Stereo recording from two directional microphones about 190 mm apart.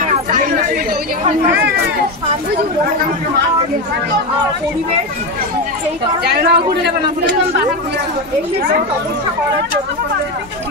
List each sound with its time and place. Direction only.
6.2 s speech: 60° right (ahead or behind)